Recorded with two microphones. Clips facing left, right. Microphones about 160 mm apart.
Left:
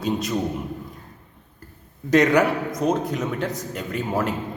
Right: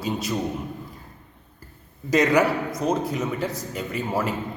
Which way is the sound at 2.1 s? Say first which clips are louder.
Left 2 dB; centre (ahead or behind).